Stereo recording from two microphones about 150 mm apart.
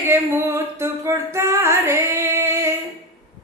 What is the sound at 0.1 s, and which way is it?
Singing, 15° right (ahead or behind).